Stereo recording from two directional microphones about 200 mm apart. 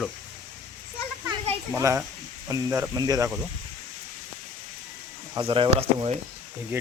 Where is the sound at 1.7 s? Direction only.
15° right (ahead or behind).